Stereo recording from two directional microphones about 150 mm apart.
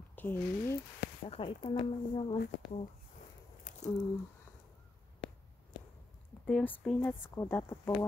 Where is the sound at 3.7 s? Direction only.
60° left (ahead or behind).